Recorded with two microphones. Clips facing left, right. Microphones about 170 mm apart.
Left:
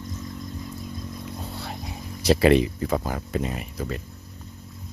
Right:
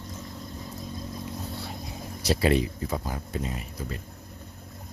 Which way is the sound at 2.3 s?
80° left.